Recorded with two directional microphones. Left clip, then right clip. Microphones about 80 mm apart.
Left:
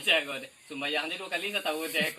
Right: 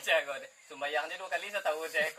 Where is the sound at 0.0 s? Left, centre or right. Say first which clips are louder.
Left 3 dB; centre.